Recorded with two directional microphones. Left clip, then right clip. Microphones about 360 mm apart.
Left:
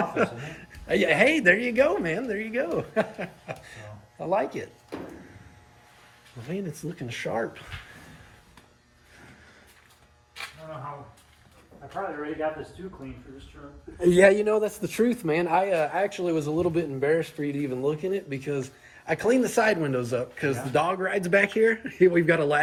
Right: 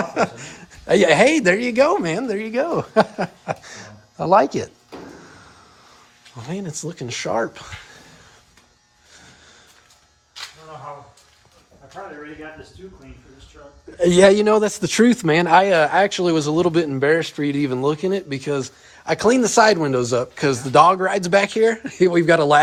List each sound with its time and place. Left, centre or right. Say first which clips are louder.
0.0 s a sound: right 5 dB; centre
0.9 s a man's voice: right 7 dB; centre
4.2 s speech: right 11 dB; right
7.1 s a man's voice: right 7 dB; centre
14.3 s a man's voice: right 8 dB; right